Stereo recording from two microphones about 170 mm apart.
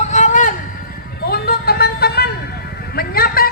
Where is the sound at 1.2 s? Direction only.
65° left (ahead or behind).